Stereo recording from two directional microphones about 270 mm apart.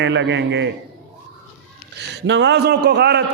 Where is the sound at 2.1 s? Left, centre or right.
Right.